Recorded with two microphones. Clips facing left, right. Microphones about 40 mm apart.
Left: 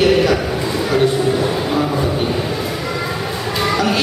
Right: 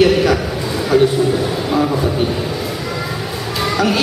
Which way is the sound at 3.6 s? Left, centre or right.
Centre.